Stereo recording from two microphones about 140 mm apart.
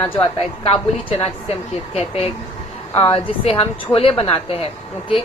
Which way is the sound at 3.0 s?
45° left (ahead or behind).